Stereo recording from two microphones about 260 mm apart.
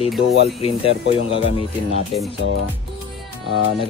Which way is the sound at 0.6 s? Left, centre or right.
Left.